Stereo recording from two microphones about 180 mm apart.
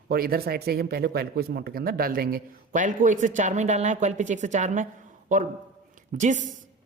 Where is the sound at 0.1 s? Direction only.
55° right (ahead or behind).